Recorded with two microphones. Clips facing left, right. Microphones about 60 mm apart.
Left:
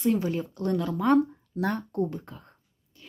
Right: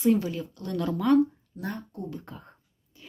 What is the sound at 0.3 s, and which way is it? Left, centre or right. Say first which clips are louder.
Speech: left 5 dB; left.